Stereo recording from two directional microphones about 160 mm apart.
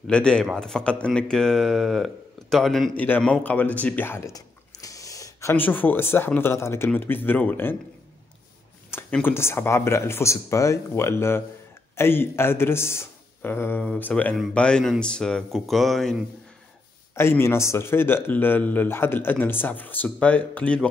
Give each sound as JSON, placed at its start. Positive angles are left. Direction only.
{"t": 0.0, "sound": "a man's voice", "side_deg": 5}
{"t": 8.9, "sound": "a man's voice", "side_deg": 15}
{"t": 17.1, "sound": "a man's voice", "side_deg": 15}